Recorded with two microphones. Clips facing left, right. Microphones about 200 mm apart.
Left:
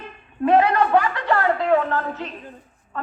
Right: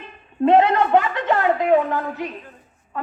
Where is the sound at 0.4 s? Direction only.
25° right (ahead or behind).